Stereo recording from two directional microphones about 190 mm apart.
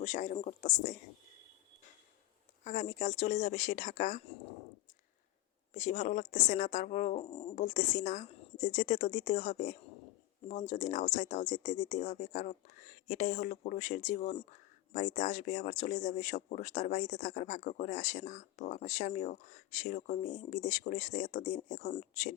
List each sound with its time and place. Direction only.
0.0 s speech: 40° left (ahead or behind)
2.6 s speech: 40° left (ahead or behind)
5.7 s speech: 40° left (ahead or behind)